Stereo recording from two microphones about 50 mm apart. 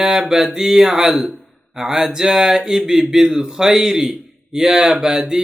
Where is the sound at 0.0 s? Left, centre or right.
Centre.